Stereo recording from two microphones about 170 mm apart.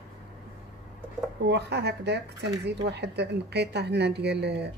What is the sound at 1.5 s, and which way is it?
Speech, 80° right.